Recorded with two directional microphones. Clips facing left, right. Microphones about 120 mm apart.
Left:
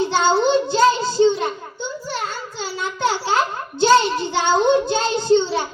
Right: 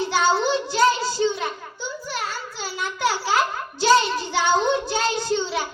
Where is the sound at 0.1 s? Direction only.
25° left (ahead or behind).